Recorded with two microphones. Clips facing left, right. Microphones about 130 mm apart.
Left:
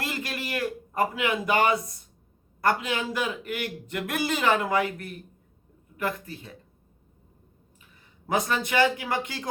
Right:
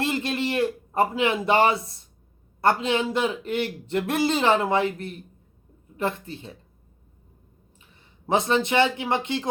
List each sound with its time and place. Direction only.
0.0 s a sound: 25° right (ahead or behind)
2.6 s a man's voice: 30° right (ahead or behind)
8.3 s a man's voice: 25° right (ahead or behind)